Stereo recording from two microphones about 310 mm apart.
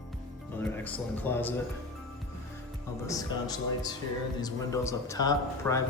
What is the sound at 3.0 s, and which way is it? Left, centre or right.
Speech, centre.